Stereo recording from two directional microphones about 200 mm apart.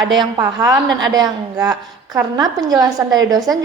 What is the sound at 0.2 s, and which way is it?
A woman's voice, 15° right (ahead or behind).